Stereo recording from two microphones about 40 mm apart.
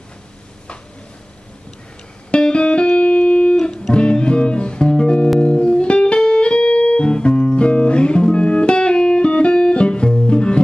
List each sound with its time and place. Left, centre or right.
2.3 s music: left
3.5 s music: centre